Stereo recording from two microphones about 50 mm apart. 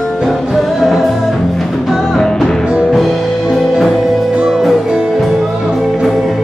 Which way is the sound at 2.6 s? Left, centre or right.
Centre.